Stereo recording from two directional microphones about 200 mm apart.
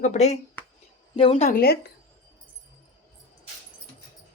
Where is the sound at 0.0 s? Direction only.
35° left (ahead or behind).